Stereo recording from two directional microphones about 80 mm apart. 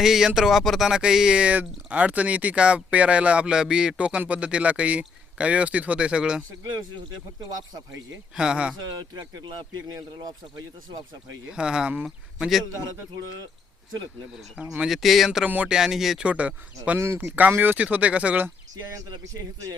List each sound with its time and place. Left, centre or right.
0.0 s speech: centre
8.4 s speech: centre
9.0 s speech: right
11.4 s speech: centre
12.0 s speech: centre
14.3 s speech: centre
15.4 s speech: centre
15.7 s speech: centre
16.2 s speech: centre
17.0 s speech: right
18.9 s a man's voice: right